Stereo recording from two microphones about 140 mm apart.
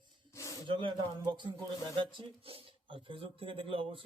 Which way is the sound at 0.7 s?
35° right (ahead or behind).